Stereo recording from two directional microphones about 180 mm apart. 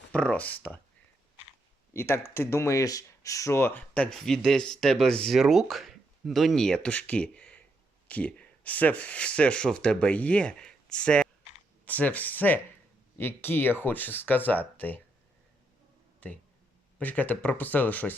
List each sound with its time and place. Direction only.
0.1 s speech: 5° left (ahead or behind)
1.9 s speech: 15° left (ahead or behind)
16.2 s speech: 10° left (ahead or behind)